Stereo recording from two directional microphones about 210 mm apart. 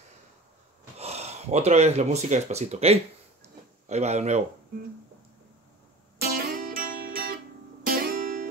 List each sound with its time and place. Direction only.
0.9 s speech: 30° right (ahead or behind)
6.3 s music: 45° right (ahead or behind)